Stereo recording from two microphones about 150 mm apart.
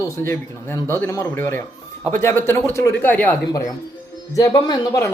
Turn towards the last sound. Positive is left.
turn(degrees=20)  # may be behind; listen again after turning